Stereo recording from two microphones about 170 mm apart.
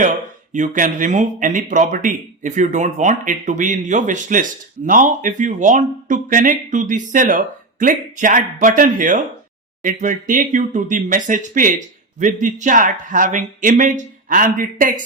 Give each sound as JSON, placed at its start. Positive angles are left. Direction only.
{"t": 0.0, "sound": "speech", "side_deg": -50}